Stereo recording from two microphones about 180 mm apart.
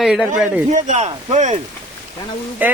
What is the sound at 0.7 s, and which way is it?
Speech, 40° right (ahead or behind).